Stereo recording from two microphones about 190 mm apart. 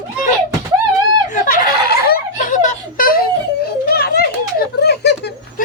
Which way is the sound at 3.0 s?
50° left (ahead or behind).